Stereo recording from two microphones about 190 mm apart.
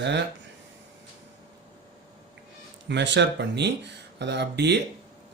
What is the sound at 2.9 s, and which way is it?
Speech, 65° right (ahead or behind).